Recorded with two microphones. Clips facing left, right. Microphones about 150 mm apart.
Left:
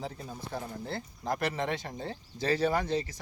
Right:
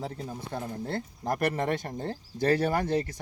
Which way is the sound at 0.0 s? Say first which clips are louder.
Right 3 dB; 60° right (ahead or behind).